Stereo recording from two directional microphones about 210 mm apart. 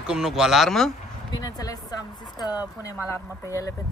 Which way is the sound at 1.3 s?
20° left (ahead or behind).